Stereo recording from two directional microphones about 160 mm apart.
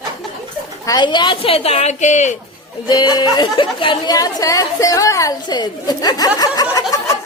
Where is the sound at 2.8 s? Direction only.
25° left (ahead or behind).